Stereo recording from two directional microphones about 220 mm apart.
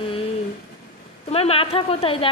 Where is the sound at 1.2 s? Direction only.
25° left (ahead or behind).